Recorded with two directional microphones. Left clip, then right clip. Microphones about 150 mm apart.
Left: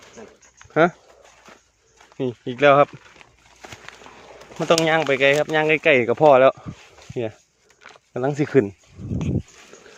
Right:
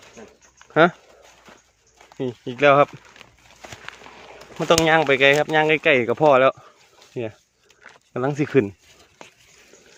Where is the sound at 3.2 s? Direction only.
90° right.